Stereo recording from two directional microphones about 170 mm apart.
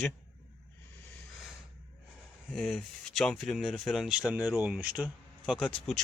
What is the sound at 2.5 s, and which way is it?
Speech, centre (ahead or behind).